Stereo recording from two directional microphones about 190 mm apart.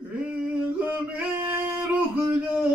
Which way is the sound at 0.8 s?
10° right (ahead or behind).